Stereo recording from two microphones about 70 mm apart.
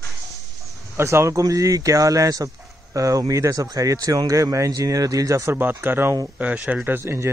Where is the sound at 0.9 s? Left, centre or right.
Right.